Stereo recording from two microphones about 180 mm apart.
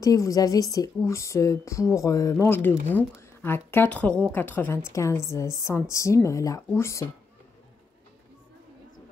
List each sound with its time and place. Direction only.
0.0 s a woman's voice: 20° left (ahead or behind)